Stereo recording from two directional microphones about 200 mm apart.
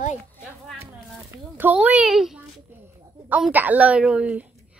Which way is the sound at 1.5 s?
10° right (ahead or behind).